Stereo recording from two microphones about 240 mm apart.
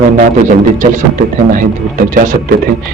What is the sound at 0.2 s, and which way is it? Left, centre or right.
Speech, right.